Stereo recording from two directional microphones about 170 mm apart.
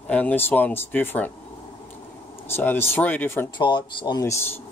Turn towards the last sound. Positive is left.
turn(degrees=25)  # may be behind; listen again after turning